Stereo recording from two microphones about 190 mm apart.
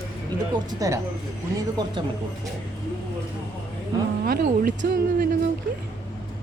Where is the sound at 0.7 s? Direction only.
20° right (ahead or behind).